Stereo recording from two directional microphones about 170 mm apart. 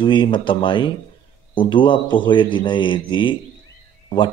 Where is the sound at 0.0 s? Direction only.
30° left (ahead or behind).